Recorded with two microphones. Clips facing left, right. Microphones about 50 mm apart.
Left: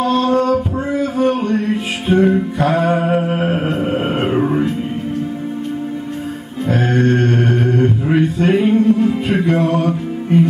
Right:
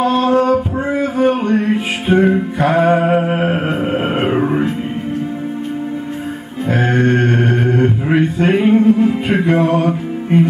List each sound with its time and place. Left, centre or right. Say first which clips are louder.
0.0 s male singing: right 2 dB; centre
6.7 s mantra: right 1 dB; centre